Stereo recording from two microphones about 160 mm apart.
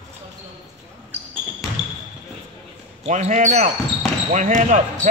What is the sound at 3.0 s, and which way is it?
Speech, 50° right (ahead or behind).